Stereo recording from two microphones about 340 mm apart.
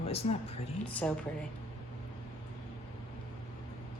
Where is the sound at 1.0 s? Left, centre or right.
Centre.